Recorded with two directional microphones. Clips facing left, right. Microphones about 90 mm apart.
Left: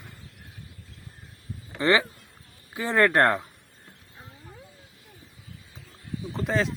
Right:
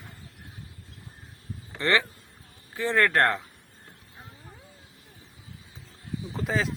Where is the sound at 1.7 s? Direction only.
15° left (ahead or behind).